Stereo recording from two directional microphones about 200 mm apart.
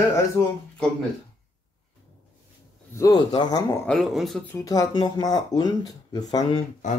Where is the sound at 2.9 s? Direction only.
20° left (ahead or behind).